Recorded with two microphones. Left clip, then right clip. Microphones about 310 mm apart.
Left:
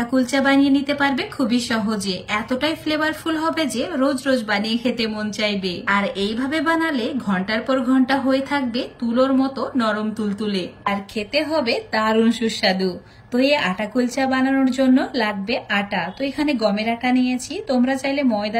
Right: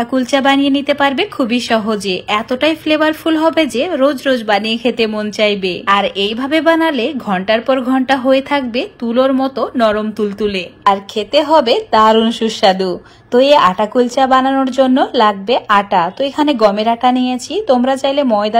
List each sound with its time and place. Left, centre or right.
0.0 s a woman's voice: centre
12.0 s speech: right